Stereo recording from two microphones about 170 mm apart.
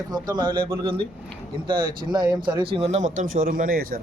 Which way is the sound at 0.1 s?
25° right (ahead or behind).